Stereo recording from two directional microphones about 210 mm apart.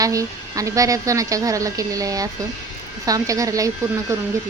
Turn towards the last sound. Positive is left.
turn(degrees=-15)  # may be behind; listen again after turning